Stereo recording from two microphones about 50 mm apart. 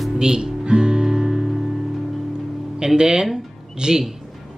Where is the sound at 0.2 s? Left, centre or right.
Centre.